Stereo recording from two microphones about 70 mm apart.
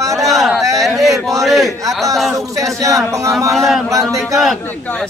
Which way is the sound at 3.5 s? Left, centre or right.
Centre.